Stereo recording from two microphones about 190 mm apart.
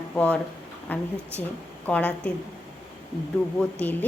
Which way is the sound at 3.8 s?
10° left (ahead or behind).